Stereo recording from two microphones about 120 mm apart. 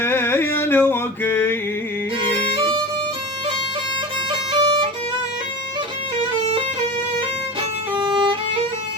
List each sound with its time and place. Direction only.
0.0 s a sound: 20° left (ahead or behind)
2.6 s violin: 45° right (ahead or behind)
4.3 s violin: 40° right (ahead or behind)
7.9 s violin: 45° right (ahead or behind)